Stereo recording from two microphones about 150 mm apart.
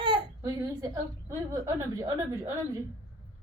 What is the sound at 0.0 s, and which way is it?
A woman's voice, 30° right (ahead or behind).